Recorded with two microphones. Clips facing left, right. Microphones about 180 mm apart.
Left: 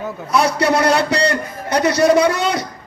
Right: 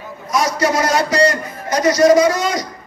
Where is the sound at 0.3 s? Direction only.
65° left (ahead or behind).